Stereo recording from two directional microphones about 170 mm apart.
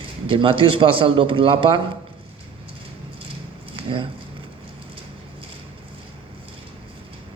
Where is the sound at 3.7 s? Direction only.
30° right (ahead or behind).